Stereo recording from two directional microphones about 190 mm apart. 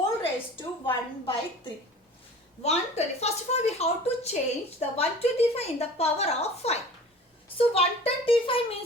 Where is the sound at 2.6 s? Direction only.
35° left (ahead or behind).